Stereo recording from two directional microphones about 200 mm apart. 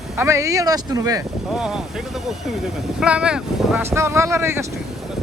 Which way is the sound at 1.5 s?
5° right (ahead or behind).